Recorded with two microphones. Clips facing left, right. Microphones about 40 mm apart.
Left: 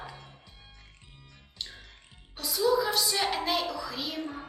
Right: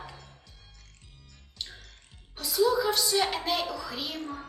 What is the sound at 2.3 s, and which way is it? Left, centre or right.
A woman's voice, centre.